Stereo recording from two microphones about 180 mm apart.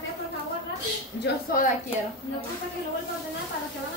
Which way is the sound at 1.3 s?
70° left (ahead or behind).